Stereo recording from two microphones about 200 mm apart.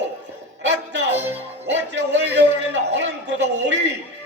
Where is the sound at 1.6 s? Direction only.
60° right (ahead or behind).